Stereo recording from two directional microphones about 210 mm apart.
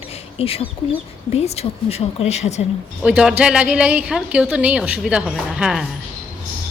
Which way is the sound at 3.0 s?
5° right (ahead or behind).